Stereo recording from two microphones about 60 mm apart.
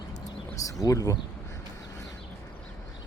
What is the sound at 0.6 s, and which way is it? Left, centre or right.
Speech, left.